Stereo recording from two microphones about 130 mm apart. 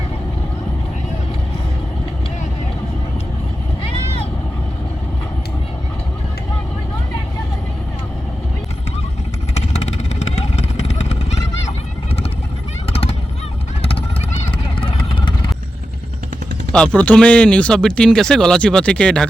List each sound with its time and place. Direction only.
10.2 s vehicle: 55° left (ahead or behind)
14.8 s vehicle: 40° left (ahead or behind)
16.7 s speech: 10° left (ahead or behind)